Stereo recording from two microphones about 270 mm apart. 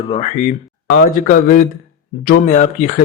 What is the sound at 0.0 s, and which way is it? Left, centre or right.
Speech, left.